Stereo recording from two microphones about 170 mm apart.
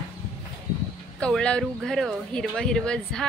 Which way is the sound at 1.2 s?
5° left (ahead or behind).